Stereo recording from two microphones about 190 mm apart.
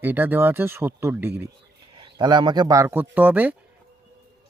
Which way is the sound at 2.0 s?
25° right (ahead or behind).